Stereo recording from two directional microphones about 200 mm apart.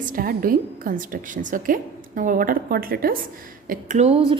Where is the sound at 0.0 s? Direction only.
45° right (ahead or behind).